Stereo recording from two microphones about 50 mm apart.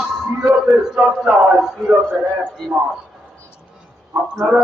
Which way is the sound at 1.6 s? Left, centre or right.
Centre.